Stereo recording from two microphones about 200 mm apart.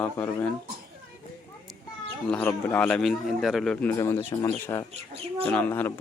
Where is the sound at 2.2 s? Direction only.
10° left (ahead or behind).